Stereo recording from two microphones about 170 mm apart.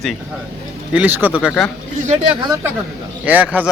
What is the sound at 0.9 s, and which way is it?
Speech, 10° right (ahead or behind).